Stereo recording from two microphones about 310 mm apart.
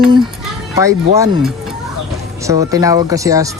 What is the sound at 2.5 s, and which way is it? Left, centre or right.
Speech, centre.